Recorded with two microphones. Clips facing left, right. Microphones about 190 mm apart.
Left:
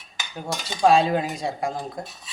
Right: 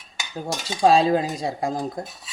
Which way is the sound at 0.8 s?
35° right (ahead or behind).